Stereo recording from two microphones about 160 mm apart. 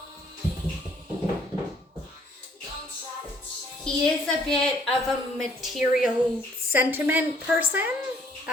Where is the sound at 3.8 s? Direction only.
5° left (ahead or behind).